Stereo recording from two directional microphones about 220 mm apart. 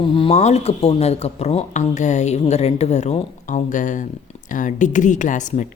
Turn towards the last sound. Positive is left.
turn(degrees=35)  # may be behind; listen again after turning